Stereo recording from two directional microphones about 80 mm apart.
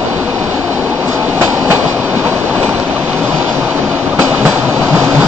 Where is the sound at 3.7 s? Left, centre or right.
Centre.